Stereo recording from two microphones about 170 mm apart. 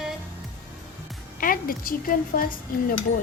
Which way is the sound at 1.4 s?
55° left (ahead or behind).